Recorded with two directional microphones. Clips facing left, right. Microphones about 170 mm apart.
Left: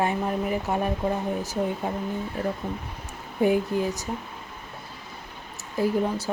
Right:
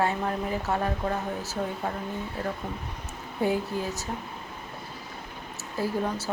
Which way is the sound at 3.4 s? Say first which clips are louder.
Left 5 dB; 15° left (ahead or behind).